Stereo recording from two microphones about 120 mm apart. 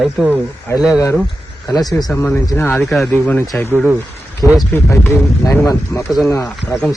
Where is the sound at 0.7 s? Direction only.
20° left (ahead or behind).